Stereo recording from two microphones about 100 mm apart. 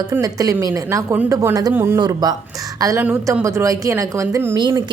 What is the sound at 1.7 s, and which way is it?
Speech, 25° right (ahead or behind).